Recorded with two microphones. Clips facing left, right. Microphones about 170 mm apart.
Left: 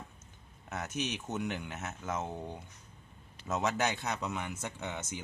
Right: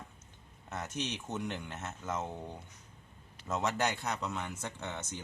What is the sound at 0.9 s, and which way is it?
A man's voice, 15° left (ahead or behind).